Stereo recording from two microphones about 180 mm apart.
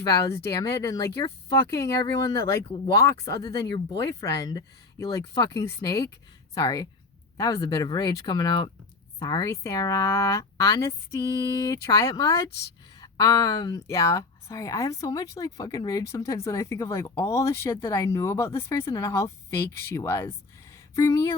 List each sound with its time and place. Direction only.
0.0 s speech: 15° left (ahead or behind)